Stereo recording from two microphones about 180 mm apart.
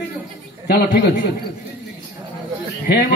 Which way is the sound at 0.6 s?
60° left (ahead or behind).